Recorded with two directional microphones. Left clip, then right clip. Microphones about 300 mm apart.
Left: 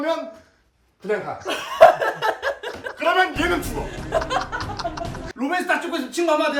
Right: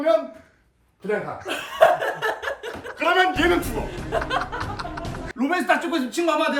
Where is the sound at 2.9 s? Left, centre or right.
Centre.